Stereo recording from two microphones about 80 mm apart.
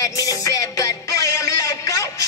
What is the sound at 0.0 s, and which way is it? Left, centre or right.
Music, left.